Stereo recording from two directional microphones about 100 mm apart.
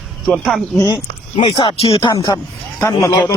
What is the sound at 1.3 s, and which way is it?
Speech, 50° left (ahead or behind).